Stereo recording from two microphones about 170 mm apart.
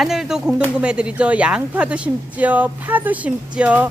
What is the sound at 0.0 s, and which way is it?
Speech, centre (ahead or behind).